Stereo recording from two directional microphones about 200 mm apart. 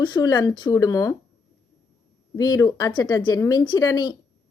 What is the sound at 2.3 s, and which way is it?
A woman's voice, 20° left (ahead or behind).